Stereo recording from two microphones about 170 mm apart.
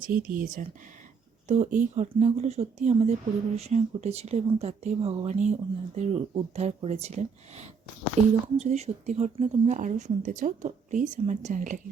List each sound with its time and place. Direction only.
0.0 s speech: 55° right (ahead or behind)
1.5 s speech: 40° right (ahead or behind)